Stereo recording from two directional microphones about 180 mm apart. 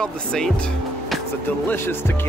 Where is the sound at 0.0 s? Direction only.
5° left (ahead or behind).